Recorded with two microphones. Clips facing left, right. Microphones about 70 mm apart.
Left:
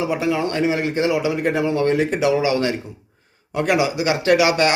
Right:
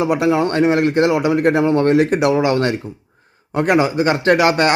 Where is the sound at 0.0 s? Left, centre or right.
Right.